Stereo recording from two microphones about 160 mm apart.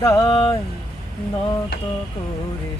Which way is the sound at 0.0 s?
25° left (ahead or behind).